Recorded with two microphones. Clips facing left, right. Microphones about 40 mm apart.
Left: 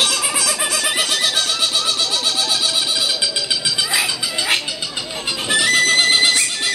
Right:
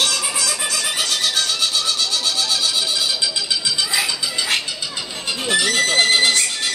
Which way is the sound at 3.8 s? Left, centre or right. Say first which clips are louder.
Left 1 dB; centre.